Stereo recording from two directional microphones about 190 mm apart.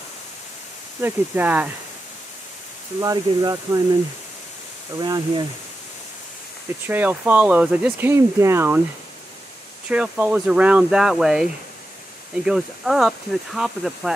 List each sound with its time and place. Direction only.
1.0 s speech: 10° right (ahead or behind)
3.0 s speech: 20° right (ahead or behind)
4.9 s speech: 20° right (ahead or behind)
6.9 s speech: 10° right (ahead or behind)
9.8 s speech: 5° right (ahead or behind)
12.4 s speech: centre (ahead or behind)